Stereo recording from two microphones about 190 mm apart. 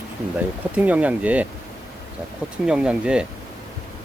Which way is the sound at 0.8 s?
10° right (ahead or behind).